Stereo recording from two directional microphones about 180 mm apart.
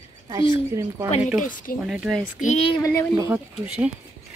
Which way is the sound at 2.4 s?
40° left (ahead or behind).